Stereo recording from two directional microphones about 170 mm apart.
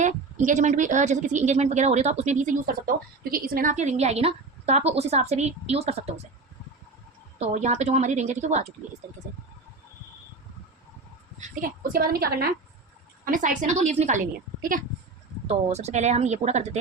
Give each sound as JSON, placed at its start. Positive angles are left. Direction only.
{"t": 0.0, "sound": "a woman's voice", "side_deg": -45}
{"t": 7.3, "sound": "a woman's voice", "side_deg": -40}
{"t": 11.3, "sound": "a woman's voice", "side_deg": -45}
{"t": 11.9, "sound": "a woman's voice", "side_deg": -60}
{"t": 13.2, "sound": "a woman's voice", "side_deg": -50}
{"t": 15.4, "sound": "speech", "side_deg": -40}